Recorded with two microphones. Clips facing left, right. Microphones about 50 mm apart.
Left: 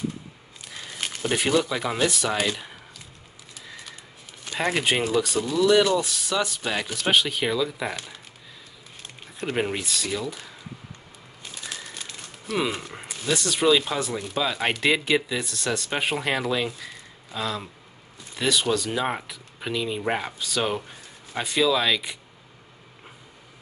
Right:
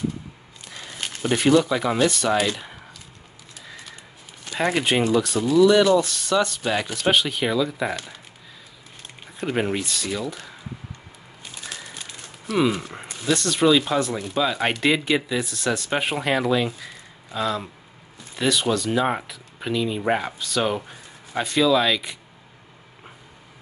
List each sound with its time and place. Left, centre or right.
0.7 s speech: centre
3.6 s a sound: centre
4.5 s speech: centre
9.4 s speech: centre
11.5 s bird: centre
12.8 s speech: centre